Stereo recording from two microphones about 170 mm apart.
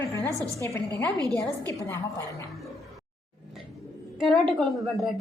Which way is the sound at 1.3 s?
5° left (ahead or behind).